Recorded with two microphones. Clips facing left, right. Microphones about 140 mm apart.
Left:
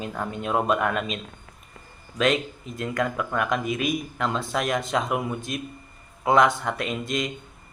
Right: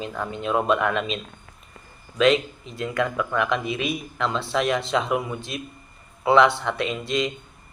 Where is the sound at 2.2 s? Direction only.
45° left (ahead or behind).